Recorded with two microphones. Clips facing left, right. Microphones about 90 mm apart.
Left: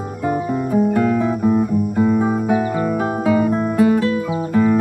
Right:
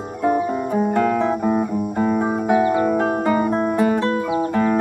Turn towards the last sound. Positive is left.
turn(degrees=-20)  # may be behind; listen again after turning